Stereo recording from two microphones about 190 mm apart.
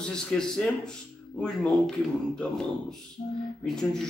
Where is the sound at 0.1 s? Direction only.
5° left (ahead or behind).